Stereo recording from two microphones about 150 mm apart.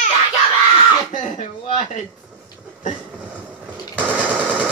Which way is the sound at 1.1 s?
60° left (ahead or behind).